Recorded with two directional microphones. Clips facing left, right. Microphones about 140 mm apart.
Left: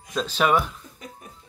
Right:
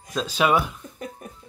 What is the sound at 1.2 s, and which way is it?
Music, 55° right (ahead or behind).